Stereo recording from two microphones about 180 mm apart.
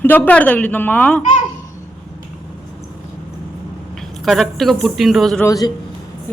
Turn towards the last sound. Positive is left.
turn(degrees=20)  # may be behind; listen again after turning